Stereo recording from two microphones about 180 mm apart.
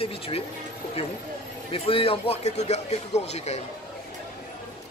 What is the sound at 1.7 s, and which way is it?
Speech, 30° left (ahead or behind).